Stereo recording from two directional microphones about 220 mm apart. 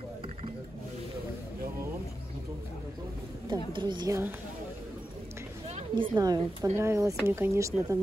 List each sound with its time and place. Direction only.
3.7 s speech: 20° right (ahead or behind)
5.8 s speech: 25° right (ahead or behind)